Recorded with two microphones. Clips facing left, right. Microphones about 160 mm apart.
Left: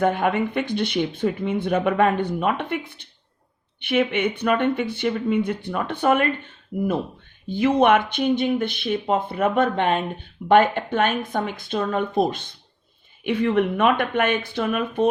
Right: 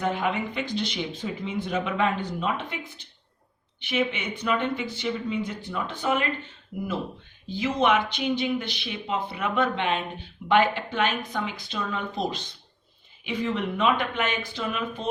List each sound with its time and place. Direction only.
0.0 s speech: 55° left (ahead or behind)